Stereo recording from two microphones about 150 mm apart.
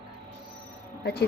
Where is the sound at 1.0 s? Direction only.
90° left.